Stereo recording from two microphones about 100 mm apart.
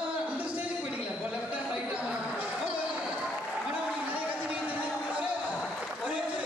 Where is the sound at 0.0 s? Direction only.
15° right (ahead or behind).